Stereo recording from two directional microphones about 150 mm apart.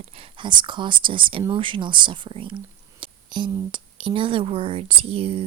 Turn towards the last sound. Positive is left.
turn(degrees=-40)  # may be behind; listen again after turning